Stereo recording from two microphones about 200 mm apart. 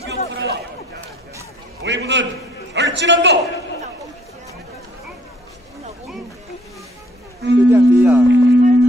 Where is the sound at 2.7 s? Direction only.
60° right (ahead or behind).